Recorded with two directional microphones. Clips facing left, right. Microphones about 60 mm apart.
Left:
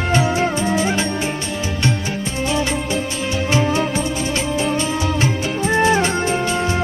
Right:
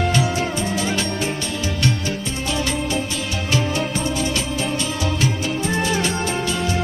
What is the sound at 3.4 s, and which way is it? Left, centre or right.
Music, left.